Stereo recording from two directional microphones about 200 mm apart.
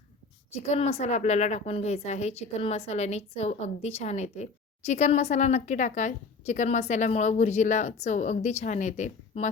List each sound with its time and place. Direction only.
0.7 s a woman's voice: 30° left (ahead or behind)